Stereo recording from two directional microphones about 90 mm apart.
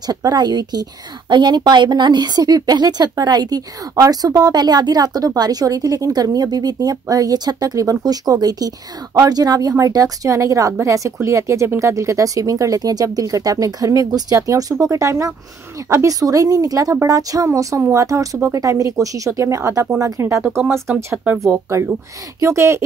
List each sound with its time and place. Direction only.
0.0 s a woman's voice: 50° right (ahead or behind)
20.9 s speech: 15° right (ahead or behind)
21.5 s a woman's voice: 30° right (ahead or behind)